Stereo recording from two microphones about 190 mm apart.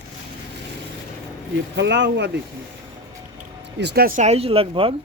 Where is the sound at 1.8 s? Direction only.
65° right (ahead or behind).